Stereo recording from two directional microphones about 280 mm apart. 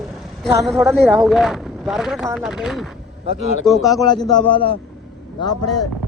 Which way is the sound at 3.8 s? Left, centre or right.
Centre.